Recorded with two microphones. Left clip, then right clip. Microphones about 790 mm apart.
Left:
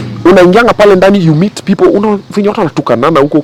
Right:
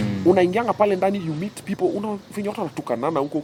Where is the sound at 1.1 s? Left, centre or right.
Left.